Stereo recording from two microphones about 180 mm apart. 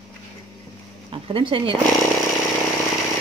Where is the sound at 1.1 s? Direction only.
30° right (ahead or behind).